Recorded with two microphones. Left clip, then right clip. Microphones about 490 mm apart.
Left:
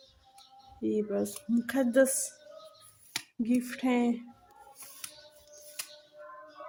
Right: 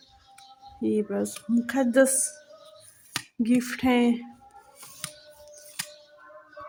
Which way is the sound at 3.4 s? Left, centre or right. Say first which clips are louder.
Right 6 dB; left.